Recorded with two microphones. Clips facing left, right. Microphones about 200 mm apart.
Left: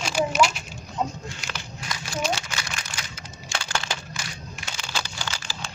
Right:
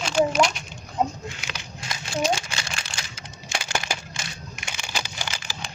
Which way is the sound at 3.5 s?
15° right (ahead or behind).